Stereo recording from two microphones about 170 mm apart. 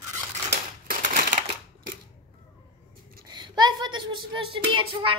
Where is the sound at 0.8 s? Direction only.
50° right (ahead or behind).